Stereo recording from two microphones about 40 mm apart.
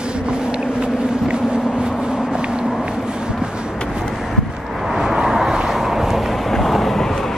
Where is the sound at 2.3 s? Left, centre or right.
Right.